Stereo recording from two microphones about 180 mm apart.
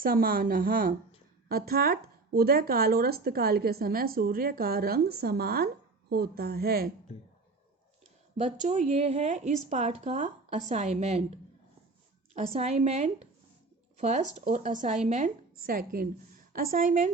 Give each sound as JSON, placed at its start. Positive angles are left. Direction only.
{"t": 0.0, "sound": "a woman's voice", "side_deg": -55}
{"t": 8.4, "sound": "speech", "side_deg": -40}
{"t": 12.3, "sound": "a woman's voice", "side_deg": -35}